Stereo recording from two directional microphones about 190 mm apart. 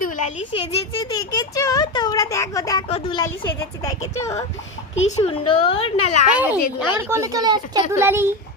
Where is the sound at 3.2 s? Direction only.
15° left (ahead or behind).